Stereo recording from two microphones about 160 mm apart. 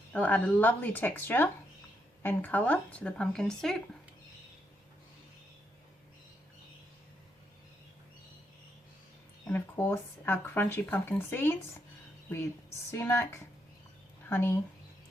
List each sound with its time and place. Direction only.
0.1 s speech: 10° left (ahead or behind)
9.5 s speech: 10° left (ahead or behind)
12.9 s speech: 15° left (ahead or behind)